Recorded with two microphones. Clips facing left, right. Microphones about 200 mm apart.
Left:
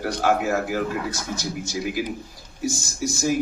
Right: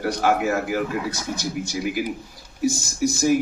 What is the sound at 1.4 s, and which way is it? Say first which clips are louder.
Speech: right 3 dB; 60° right (ahead or behind).